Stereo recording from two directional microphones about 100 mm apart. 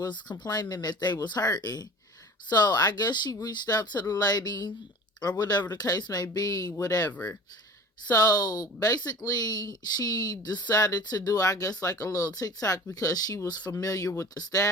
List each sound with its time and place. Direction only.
0.0 s speech: 45° left (ahead or behind)
7.1 s speech: 15° left (ahead or behind)
8.1 s speech: 40° left (ahead or behind)